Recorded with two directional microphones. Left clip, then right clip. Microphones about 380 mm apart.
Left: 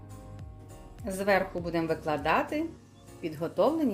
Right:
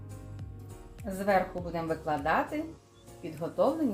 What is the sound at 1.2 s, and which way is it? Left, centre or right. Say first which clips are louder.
A woman's voice: left 1 dB; left.